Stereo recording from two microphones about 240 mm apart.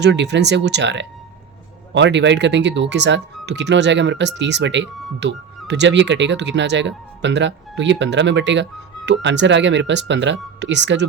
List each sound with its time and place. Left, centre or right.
0.0 s speech: right